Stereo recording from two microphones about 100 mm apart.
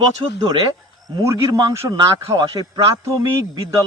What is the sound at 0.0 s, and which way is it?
Speech, 55° right (ahead or behind).